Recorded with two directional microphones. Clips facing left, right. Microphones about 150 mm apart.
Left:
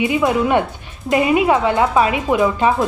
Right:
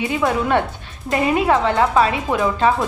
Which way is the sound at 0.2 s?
10° left (ahead or behind).